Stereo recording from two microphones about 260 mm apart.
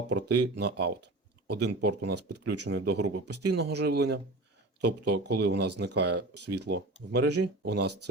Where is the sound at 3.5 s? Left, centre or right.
Right.